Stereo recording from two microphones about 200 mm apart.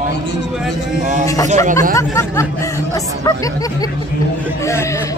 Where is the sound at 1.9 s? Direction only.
15° left (ahead or behind).